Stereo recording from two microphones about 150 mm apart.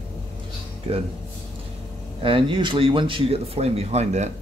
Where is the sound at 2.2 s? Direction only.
35° right (ahead or behind).